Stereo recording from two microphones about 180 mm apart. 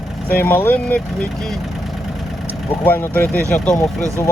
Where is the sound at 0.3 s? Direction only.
10° left (ahead or behind).